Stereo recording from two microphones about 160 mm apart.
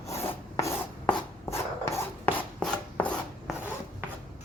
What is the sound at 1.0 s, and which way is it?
Chopping, 15° left (ahead or behind).